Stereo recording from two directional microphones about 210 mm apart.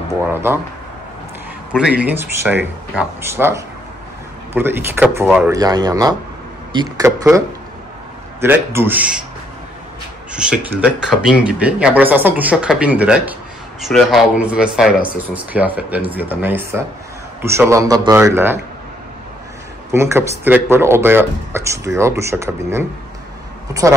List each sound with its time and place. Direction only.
0.1 s speech: 10° right (ahead or behind)
1.7 s speech: 5° right (ahead or behind)
5.6 s speech: 20° right (ahead or behind)
10.3 s speech: 5° right (ahead or behind)
19.9 s speech: 10° right (ahead or behind)